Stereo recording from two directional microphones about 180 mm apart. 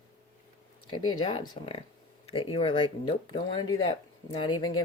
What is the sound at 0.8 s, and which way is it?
Speech, 30° left (ahead or behind).